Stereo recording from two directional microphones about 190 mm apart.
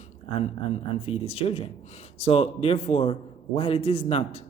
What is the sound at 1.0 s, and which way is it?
A man's voice, 30° left (ahead or behind).